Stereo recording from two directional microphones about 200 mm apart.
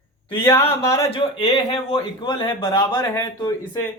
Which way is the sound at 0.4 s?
15° left (ahead or behind).